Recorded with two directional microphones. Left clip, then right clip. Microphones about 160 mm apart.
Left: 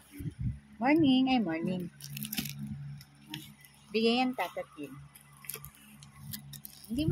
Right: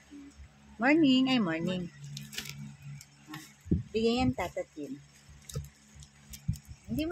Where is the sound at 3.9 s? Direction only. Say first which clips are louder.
Left 1 dB; 10° right (ahead or behind).